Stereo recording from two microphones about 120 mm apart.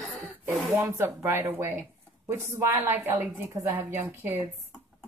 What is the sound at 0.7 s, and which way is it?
A woman's voice, 20° right (ahead or behind).